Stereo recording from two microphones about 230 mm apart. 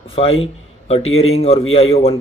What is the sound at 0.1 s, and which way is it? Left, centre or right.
Speech, left.